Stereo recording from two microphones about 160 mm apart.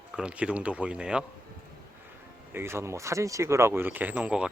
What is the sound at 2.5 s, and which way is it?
Speech, 15° right (ahead or behind).